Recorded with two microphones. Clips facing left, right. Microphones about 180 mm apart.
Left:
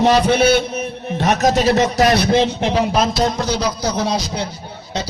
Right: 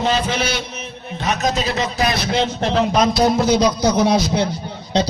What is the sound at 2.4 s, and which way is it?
A man's voice, 15° left (ahead or behind).